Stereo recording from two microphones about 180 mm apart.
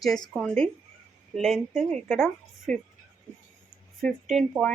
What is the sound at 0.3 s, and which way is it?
A woman's voice, 5° left (ahead or behind).